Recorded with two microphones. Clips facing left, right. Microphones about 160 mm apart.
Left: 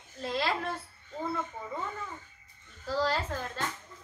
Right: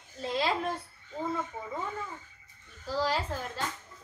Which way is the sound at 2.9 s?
10° right (ahead or behind).